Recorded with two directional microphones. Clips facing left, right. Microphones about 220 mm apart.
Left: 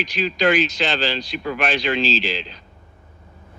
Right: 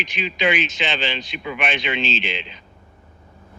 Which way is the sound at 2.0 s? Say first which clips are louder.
Left 3 dB; 35° left (ahead or behind).